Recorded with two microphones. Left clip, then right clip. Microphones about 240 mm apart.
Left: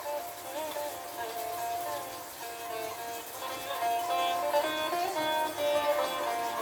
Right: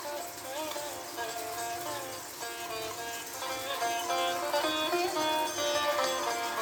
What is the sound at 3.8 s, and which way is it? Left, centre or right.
Music, right.